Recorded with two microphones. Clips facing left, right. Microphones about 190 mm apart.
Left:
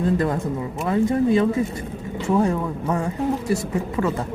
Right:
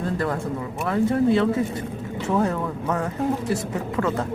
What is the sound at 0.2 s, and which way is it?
Speech, 20° left (ahead or behind).